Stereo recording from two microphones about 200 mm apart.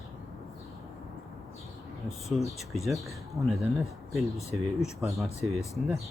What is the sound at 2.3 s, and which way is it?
Speech, centre (ahead or behind).